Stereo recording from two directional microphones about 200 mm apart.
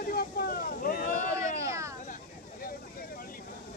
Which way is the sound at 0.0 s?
50° left (ahead or behind).